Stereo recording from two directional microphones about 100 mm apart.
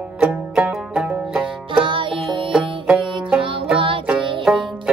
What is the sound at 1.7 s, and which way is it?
Music, 55° right (ahead or behind).